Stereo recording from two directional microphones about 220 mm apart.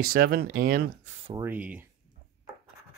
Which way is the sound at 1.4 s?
5° right (ahead or behind).